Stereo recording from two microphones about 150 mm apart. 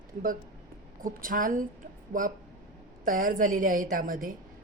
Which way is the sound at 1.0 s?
65° right (ahead or behind).